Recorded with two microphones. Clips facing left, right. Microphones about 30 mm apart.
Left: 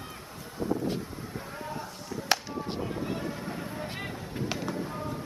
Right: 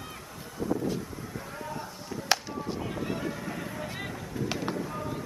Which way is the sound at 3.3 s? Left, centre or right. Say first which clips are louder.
Even; left.